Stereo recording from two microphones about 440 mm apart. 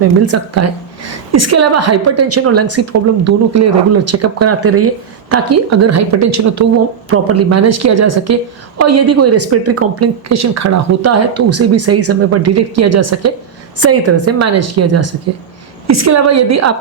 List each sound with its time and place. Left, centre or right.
0.3 s speech: right